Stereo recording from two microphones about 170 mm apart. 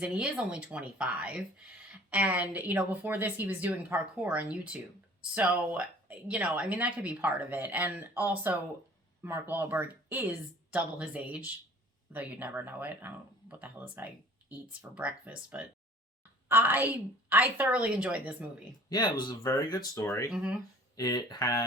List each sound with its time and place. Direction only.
0.0 s speech: 5° right (ahead or behind)
18.9 s speech: 25° left (ahead or behind)
20.3 s speech: 5° right (ahead or behind)
20.9 s speech: 25° left (ahead or behind)